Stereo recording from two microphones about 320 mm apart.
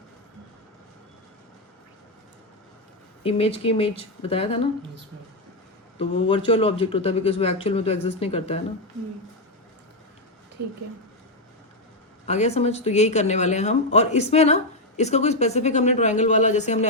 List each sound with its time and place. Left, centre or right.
3.2 s speech: centre
6.0 s speech: centre
12.2 s speech: centre